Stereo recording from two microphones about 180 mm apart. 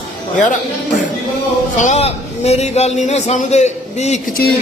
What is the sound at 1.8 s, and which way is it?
A man's voice, 40° left (ahead or behind).